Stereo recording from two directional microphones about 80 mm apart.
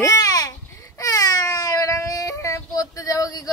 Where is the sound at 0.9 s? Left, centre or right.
Left.